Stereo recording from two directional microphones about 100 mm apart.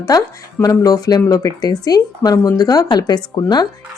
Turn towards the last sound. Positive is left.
turn(degrees=40)  # may be behind; listen again after turning